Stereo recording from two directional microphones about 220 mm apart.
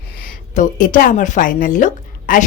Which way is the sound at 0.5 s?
35° left (ahead or behind).